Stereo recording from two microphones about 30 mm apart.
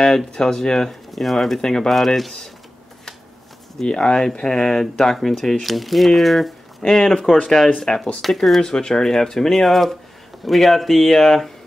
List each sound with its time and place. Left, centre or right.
0.3 s speech: centre
1.6 s speech: centre
1.9 s speech: centre
3.8 s speech: left
8.2 s speech: centre
8.5 s speech: left